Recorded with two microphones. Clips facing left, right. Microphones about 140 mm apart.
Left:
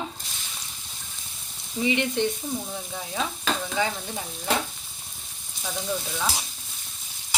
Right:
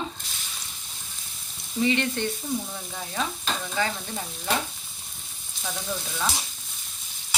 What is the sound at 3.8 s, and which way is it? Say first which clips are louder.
Sizzle: even; 20° left (ahead or behind).